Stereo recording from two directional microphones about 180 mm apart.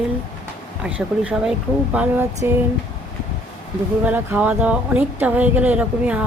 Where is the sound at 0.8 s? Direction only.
5° right (ahead or behind).